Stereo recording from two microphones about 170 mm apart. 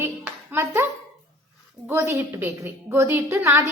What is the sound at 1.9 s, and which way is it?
A woman's voice, 15° right (ahead or behind).